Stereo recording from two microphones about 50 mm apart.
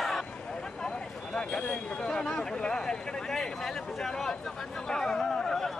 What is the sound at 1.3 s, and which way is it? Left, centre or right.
Speech, centre.